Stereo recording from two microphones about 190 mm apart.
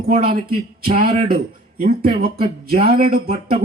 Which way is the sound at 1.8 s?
50° right (ahead or behind).